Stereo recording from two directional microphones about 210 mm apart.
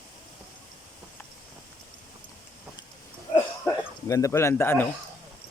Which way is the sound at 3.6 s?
15° left (ahead or behind).